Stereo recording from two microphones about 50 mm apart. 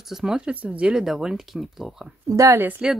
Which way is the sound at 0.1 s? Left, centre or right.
Centre.